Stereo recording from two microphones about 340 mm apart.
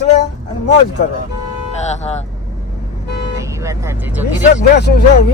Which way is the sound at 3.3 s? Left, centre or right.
Centre.